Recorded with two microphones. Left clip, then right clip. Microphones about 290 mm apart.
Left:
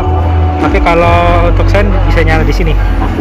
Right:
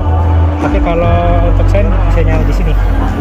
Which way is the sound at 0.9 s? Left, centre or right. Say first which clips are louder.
Left 6 dB; left.